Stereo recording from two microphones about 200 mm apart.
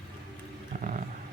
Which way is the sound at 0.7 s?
40° right (ahead or behind).